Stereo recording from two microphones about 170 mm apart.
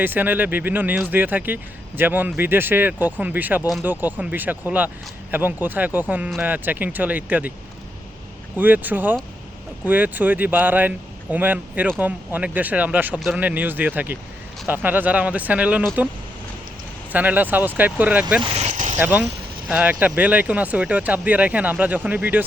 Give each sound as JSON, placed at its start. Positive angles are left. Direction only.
{"t": 0.0, "sound": "speech", "side_deg": -10}
{"t": 8.5, "sound": "speech", "side_deg": -10}
{"t": 17.1, "sound": "speech", "side_deg": -10}
{"t": 18.5, "sound": "vehicle", "side_deg": -45}
{"t": 18.9, "sound": "speech", "side_deg": -10}